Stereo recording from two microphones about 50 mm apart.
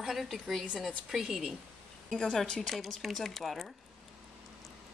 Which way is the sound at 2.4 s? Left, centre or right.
Centre.